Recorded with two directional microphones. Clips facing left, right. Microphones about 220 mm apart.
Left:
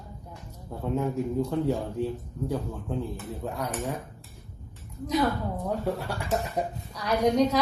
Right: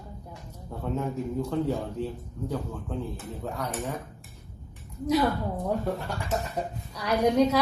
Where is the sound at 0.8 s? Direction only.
10° left (ahead or behind).